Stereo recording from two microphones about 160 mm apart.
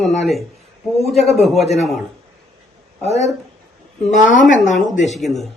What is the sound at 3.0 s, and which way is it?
Speech, 40° left (ahead or behind).